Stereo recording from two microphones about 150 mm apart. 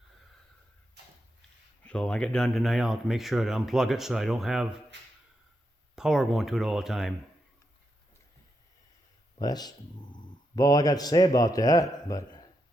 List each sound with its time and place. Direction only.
1.8 s speech: 5° left (ahead or behind)
6.0 s speech: 5° right (ahead or behind)
9.4 s speech: 25° left (ahead or behind)